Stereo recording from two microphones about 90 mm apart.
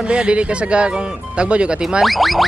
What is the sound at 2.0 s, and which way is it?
Speech, centre (ahead or behind).